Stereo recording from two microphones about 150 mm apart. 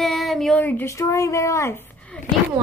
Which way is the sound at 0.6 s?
15° left (ahead or behind).